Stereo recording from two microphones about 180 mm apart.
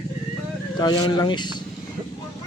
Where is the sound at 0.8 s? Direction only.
25° left (ahead or behind).